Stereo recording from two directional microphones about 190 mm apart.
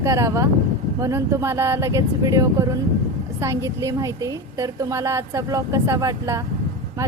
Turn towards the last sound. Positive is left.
turn(degrees=-15)  # may be behind; listen again after turning